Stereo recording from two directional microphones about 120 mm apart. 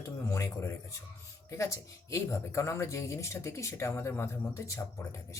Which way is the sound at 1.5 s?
25° left (ahead or behind).